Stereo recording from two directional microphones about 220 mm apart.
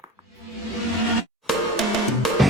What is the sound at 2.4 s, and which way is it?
Music, centre (ahead or behind).